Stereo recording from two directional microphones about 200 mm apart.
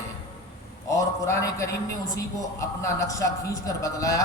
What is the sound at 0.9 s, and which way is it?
A man's voice, 15° left (ahead or behind).